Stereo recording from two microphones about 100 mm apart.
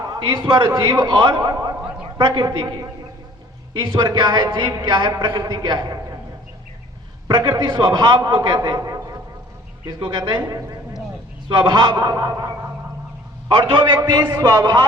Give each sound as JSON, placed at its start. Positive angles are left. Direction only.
{"t": 0.0, "sound": "a man's voice", "side_deg": -45}
{"t": 1.4, "sound": "a sound", "side_deg": -35}
{"t": 2.1, "sound": "a man's voice", "side_deg": -50}
{"t": 3.8, "sound": "a man's voice", "side_deg": -50}
{"t": 7.3, "sound": "a man's voice", "side_deg": -55}
{"t": 10.0, "sound": "a man's voice", "side_deg": -50}
{"t": 10.5, "sound": "a sound", "side_deg": -40}
{"t": 11.4, "sound": "a man's voice", "side_deg": -50}
{"t": 13.5, "sound": "a man's voice", "side_deg": -55}